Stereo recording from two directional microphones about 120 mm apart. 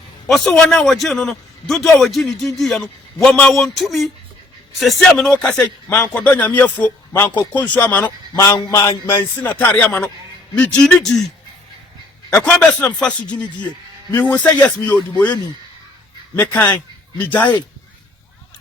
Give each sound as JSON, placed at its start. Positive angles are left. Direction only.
{"t": 0.3, "sound": "a man's voice", "side_deg": 5}
{"t": 8.4, "sound": "a sound", "side_deg": 35}
{"t": 8.7, "sound": "speech", "side_deg": 20}
{"t": 12.3, "sound": "speech", "side_deg": 10}